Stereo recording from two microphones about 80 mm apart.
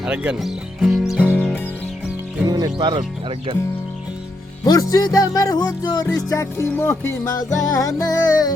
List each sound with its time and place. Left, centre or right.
0.0 s speech: centre
1.2 s music: left
2.5 s speech: right
4.6 s music: left
6.2 s music: left
7.3 s music: left